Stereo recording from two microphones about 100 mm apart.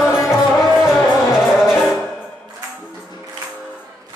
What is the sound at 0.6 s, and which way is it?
Music, 5° right (ahead or behind).